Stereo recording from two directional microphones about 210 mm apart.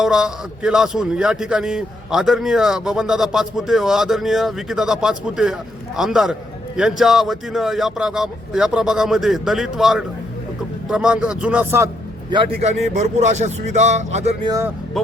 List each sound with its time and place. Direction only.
0.0 s speech: 5° right (ahead or behind)
12.9 s speech: 35° right (ahead or behind)
15.0 s speech: centre (ahead or behind)